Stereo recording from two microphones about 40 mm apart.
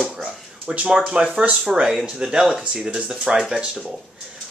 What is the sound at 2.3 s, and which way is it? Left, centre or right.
Speech, centre.